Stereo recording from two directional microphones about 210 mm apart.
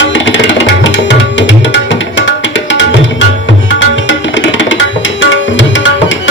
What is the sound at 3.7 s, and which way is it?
Music, 60° left (ahead or behind).